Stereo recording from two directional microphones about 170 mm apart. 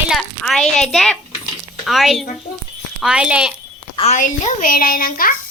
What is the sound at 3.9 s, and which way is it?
A child's voice, 40° left (ahead or behind).